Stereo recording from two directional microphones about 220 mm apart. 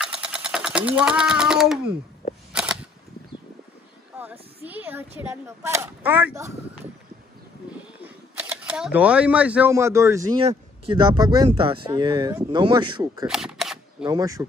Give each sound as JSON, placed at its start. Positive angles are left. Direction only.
{"t": 0.0, "sound": "sewing machine", "side_deg": -5}
{"t": 2.5, "sound": "cap gun", "side_deg": -5}
{"t": 4.1, "sound": "a sound", "side_deg": -10}
{"t": 4.6, "sound": "speech", "side_deg": -10}
{"t": 8.0, "sound": "speech", "side_deg": -5}
{"t": 13.3, "sound": "single-lens reflex camera", "side_deg": 0}
{"t": 14.0, "sound": "speech", "side_deg": -15}